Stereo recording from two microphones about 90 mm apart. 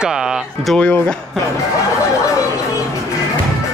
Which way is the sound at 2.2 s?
35° left (ahead or behind).